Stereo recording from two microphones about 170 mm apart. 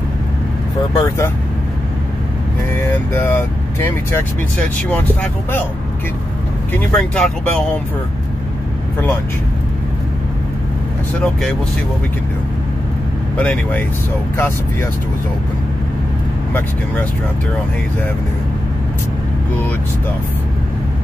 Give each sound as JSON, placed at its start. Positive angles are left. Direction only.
{"t": 0.9, "sound": "speech", "side_deg": 15}
{"t": 2.9, "sound": "speech", "side_deg": 15}
{"t": 6.9, "sound": "speech", "side_deg": 5}
{"t": 13.4, "sound": "speech", "side_deg": 10}